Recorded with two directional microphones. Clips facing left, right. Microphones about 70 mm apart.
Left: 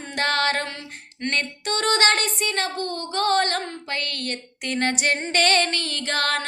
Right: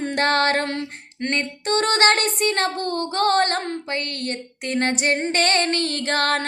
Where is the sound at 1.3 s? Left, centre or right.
Right.